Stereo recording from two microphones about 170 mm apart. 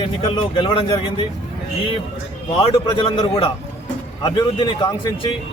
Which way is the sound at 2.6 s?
25° left (ahead or behind).